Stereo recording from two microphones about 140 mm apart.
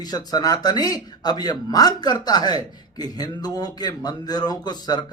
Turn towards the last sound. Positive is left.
turn(degrees=30)  # may be behind; listen again after turning